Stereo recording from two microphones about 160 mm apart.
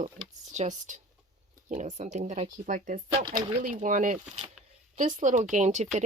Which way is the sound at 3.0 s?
30° right (ahead or behind).